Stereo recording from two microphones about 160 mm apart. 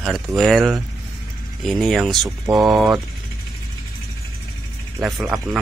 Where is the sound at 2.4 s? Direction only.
20° right (ahead or behind).